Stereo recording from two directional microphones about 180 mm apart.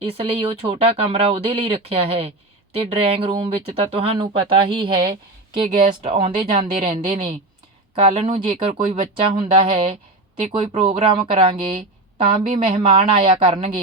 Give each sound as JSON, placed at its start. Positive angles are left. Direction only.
{"t": 0.3, "sound": "speech", "side_deg": -30}
{"t": 6.0, "sound": "speech", "side_deg": -40}
{"t": 7.0, "sound": "speech", "side_deg": -30}